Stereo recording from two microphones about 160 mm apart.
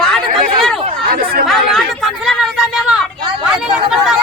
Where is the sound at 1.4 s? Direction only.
Centre (ahead or behind).